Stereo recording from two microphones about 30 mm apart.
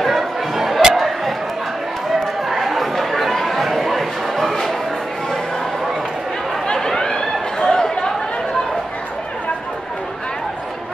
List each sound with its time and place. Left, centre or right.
0.0 s chatter: centre
0.9 s a sound: centre
2.4 s chatter: centre
3.8 s bow-wow: centre
6.7 s chatter: left